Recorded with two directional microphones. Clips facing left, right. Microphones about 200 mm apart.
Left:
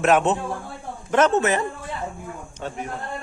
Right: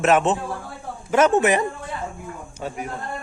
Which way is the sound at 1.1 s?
10° right (ahead or behind).